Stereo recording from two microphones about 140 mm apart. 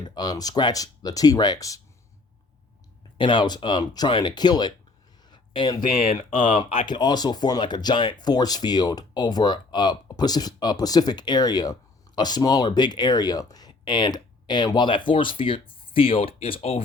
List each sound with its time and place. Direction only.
0.0 s speech: 30° left (ahead or behind)
3.2 s speech: 35° left (ahead or behind)
5.3 s a sound: 30° left (ahead or behind)
5.9 s speech: 90° left
6.5 s speech: 40° left (ahead or behind)